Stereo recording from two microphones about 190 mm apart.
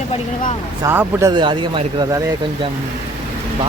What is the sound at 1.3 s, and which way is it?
Speech, 25° right (ahead or behind).